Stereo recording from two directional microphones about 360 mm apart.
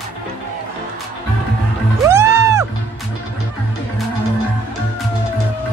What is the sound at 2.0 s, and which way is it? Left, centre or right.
Music, centre.